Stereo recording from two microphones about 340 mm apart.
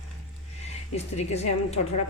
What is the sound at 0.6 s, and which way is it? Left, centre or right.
Speech, centre.